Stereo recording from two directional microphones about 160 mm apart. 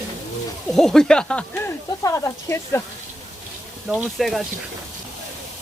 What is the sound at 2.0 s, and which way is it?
Speech, 20° left (ahead or behind).